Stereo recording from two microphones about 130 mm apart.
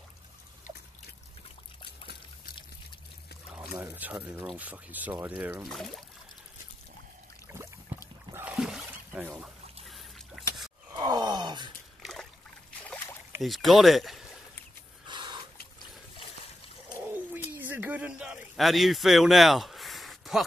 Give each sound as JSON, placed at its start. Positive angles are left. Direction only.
{"t": 3.7, "sound": "speech", "side_deg": -20}
{"t": 5.7, "sound": "speech", "side_deg": 0}
{"t": 7.5, "sound": "rowboat", "side_deg": -15}
{"t": 7.9, "sound": "boat", "side_deg": -15}
{"t": 8.5, "sound": "a sound", "side_deg": -5}
{"t": 9.8, "sound": "drip", "side_deg": 0}
{"t": 11.0, "sound": "groan", "side_deg": -30}
{"t": 12.0, "sound": "trickle", "side_deg": 5}
{"t": 13.4, "sound": "speech", "side_deg": 0}
{"t": 15.0, "sound": "a sound", "side_deg": -35}
{"t": 17.6, "sound": "a sound", "side_deg": -15}